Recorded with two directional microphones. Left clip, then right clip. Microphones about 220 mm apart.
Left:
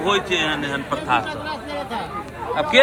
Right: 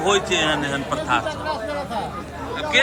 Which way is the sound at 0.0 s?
10° right (ahead or behind).